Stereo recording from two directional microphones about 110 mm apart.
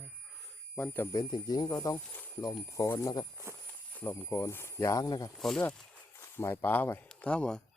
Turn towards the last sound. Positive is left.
turn(degrees=10)  # may be behind; listen again after turning